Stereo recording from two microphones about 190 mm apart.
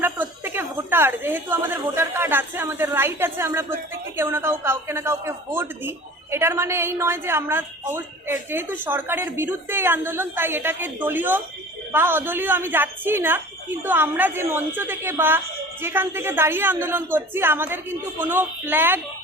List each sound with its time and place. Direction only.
0.0 s a woman's voice: 10° right (ahead or behind)